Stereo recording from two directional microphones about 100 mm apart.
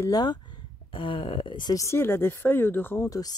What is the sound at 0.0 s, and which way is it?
Speech, 40° left (ahead or behind).